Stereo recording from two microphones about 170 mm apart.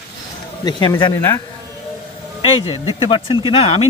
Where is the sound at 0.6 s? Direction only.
25° left (ahead or behind).